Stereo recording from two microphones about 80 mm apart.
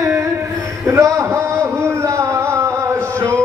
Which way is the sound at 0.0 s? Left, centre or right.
Right.